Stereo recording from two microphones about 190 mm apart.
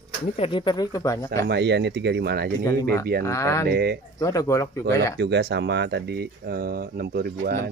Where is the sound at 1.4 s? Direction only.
60° right (ahead or behind).